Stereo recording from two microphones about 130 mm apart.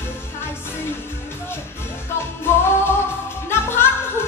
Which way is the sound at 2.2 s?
20° left (ahead or behind).